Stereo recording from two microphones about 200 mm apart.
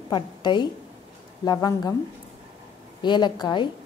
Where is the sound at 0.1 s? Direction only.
20° left (ahead or behind).